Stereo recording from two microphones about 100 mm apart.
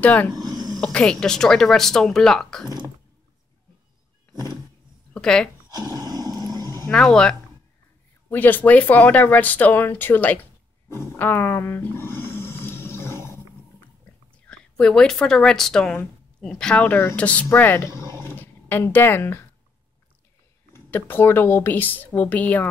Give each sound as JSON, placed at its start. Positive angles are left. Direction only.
{"t": 0.0, "sound": "a woman's voice", "side_deg": 15}
{"t": 4.3, "sound": "vehicle", "side_deg": -40}
{"t": 5.1, "sound": "speech", "side_deg": 10}
{"t": 5.7, "sound": "roar", "side_deg": -40}
{"t": 6.9, "sound": "a woman's voice", "side_deg": 5}
{"t": 8.3, "sound": "speech", "side_deg": 20}
{"t": 10.9, "sound": "snoring", "side_deg": 25}
{"t": 14.3, "sound": "a woman's voice", "side_deg": 10}
{"t": 20.7, "sound": "speech", "side_deg": 20}